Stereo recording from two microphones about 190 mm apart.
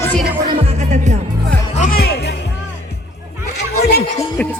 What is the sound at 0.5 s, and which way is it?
Music, 30° right (ahead or behind).